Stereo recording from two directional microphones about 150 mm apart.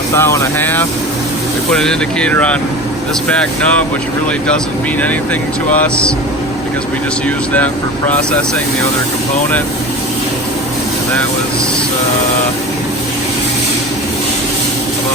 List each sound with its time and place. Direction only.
0.1 s speech: 20° left (ahead or behind)
5.7 s speech: 10° left (ahead or behind)
8.1 s speech: 5° left (ahead or behind)